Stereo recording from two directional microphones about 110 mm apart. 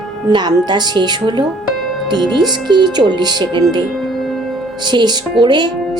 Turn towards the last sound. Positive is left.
turn(degrees=-40)  # may be behind; listen again after turning